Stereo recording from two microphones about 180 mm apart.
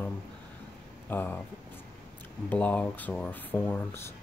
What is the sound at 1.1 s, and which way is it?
Speech, 10° left (ahead or behind).